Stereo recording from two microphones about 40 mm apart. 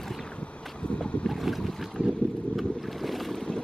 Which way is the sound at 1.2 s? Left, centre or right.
Centre.